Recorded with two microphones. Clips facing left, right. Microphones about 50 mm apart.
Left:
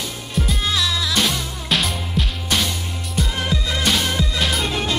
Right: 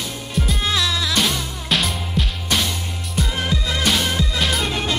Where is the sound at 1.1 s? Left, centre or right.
Centre.